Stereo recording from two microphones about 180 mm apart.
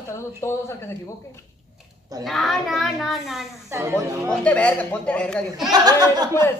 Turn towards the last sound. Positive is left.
turn(degrees=-20)  # may be behind; listen again after turning